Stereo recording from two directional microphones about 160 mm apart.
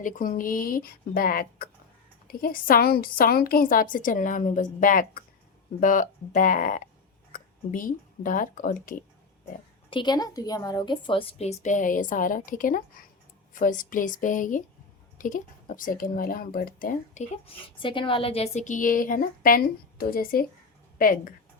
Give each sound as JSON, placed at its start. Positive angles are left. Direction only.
{"t": 0.0, "sound": "a woman's voice", "side_deg": 60}
{"t": 9.9, "sound": "a woman's voice", "side_deg": 30}
{"t": 17.2, "sound": "a woman's voice", "side_deg": 35}